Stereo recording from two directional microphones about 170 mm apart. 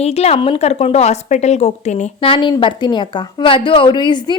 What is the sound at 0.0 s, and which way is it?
Speech, 40° left (ahead or behind).